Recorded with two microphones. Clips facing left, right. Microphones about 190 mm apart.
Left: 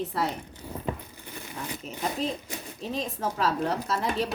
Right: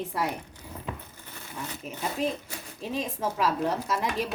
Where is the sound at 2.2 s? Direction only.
10° right (ahead or behind).